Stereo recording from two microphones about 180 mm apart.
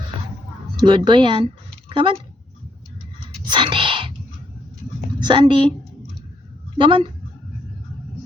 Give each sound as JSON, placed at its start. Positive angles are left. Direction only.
{"t": 0.8, "sound": "a woman's voice", "side_deg": -25}
{"t": 3.4, "sound": "whispering", "side_deg": -25}
{"t": 5.2, "sound": "a woman's voice", "side_deg": -25}
{"t": 6.7, "sound": "a woman's voice", "side_deg": -25}